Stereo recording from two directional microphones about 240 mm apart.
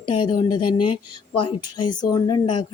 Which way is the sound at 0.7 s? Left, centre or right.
Left.